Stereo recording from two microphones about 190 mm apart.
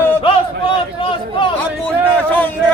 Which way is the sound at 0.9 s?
25° left (ahead or behind).